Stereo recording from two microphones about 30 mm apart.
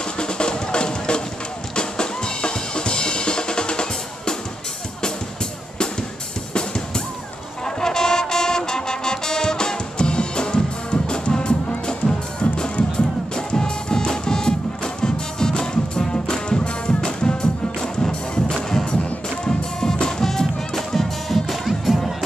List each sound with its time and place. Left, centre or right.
0.2 s music: left
1.8 s drum kit: left
7.6 s music: centre